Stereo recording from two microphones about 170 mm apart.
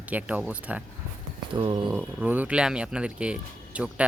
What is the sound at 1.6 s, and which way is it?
Speech, 30° right (ahead or behind).